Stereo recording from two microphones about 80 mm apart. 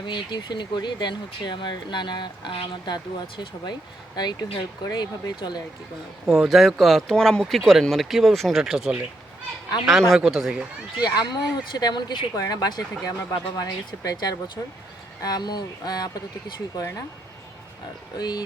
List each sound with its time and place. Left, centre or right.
0.0 s speech: left
5.4 s speech: left
6.2 s speech: centre
11.0 s speech: left
12.4 s speech: left
18.2 s speech: left